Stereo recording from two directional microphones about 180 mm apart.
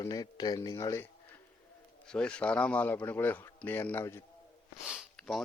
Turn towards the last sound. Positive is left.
turn(degrees=0)  # may be behind; listen again after turning